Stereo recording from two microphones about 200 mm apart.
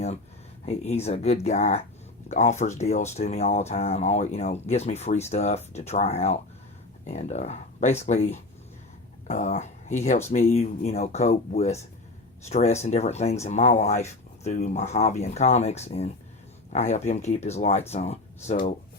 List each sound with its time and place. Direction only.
0.6 s speech: 30° left (ahead or behind)